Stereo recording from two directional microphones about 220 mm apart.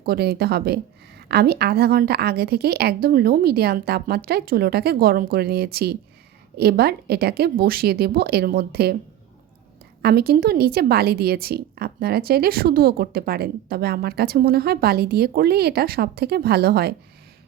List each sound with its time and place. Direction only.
0.0 s a woman's voice: 45° right (ahead or behind)
10.0 s a woman's voice: 45° right (ahead or behind)